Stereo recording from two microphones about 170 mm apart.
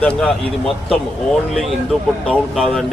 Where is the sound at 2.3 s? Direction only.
Centre (ahead or behind).